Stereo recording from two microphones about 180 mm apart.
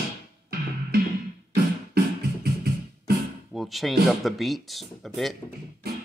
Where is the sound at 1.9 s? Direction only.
60° right (ahead or behind).